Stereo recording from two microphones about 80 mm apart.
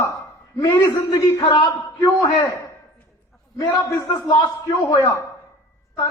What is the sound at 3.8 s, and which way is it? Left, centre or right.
A man's voice, left.